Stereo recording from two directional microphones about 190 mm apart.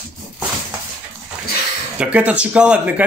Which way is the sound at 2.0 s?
5° right (ahead or behind).